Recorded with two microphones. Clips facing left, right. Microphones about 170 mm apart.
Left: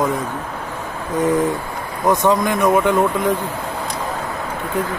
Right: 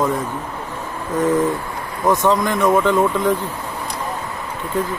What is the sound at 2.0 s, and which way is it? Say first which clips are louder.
Speech: left 1 dB; 15° left (ahead or behind).